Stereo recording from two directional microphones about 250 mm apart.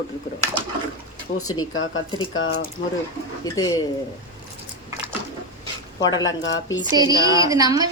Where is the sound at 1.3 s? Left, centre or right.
Centre.